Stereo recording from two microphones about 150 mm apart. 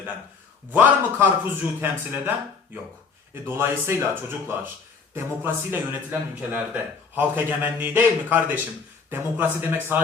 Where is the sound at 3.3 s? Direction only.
15° right (ahead or behind).